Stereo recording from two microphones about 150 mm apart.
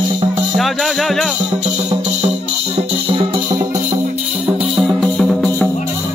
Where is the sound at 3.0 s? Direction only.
35° right (ahead or behind).